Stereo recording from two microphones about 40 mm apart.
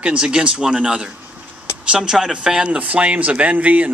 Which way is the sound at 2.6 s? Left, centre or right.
Right.